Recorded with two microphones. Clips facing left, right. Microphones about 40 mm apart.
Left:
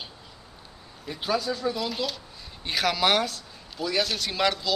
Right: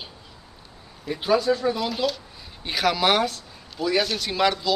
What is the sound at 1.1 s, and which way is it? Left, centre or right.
Speech, centre.